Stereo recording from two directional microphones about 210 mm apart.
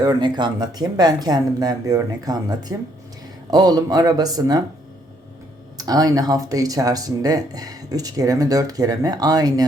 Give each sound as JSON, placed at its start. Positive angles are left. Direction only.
{"t": 0.0, "sound": "speech", "side_deg": -20}
{"t": 5.7, "sound": "speech", "side_deg": -20}